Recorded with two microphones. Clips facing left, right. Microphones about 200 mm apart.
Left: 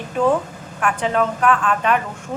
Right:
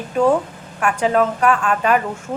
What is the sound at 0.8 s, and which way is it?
Speech, 5° right (ahead or behind).